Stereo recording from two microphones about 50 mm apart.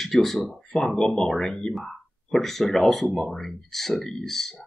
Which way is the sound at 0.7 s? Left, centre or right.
Centre.